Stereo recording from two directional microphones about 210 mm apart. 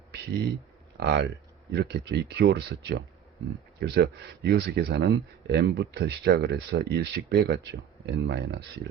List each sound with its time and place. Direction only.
0.9 s speech: 50° right (ahead or behind)